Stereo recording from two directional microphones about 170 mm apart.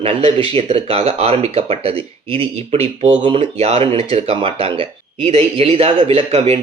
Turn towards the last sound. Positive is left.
turn(degrees=-35)  # may be behind; listen again after turning